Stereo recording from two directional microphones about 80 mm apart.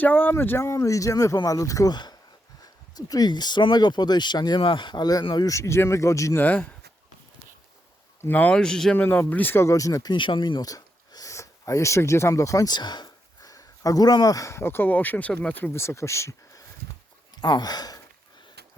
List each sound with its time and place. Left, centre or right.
0.0 s speech: left
1.9 s speech: left
5.5 s speech: left
6.3 s speech: left
8.2 s speech: left
8.5 s speech: centre
9.0 s speech: centre
9.6 s speech: left
10.1 s speech: left
10.6 s a sound: left
12.6 s speech: left
15.7 s speech: left
17.3 s speech: left